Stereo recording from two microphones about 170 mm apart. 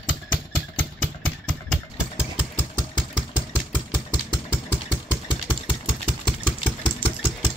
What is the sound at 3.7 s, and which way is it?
Engine, 20° left (ahead or behind).